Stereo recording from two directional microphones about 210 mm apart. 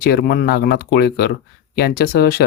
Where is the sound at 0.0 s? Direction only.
50° left (ahead or behind).